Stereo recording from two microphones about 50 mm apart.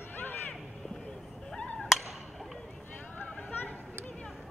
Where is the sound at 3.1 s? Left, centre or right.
Left.